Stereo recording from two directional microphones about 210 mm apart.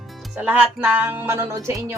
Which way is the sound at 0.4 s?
5° right (ahead or behind).